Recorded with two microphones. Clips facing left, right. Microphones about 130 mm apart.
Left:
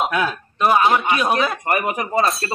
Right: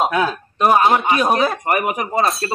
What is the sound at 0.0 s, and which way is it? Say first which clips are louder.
A man's voice: right 3 dB; 30° right (ahead or behind).